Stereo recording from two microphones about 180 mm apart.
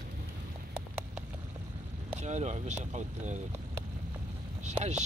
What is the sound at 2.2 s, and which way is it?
Speech, 40° right (ahead or behind).